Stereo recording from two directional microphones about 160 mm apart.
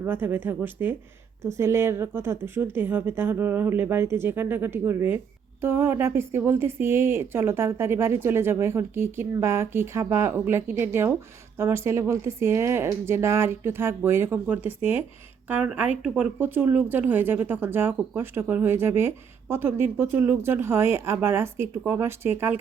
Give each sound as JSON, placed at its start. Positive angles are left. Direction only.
{"t": 0.0, "sound": "speech", "side_deg": -15}